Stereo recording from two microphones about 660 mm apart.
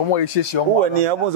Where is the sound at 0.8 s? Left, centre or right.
Right.